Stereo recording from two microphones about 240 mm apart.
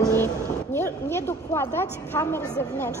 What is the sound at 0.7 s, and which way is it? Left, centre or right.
A woman's voice, centre.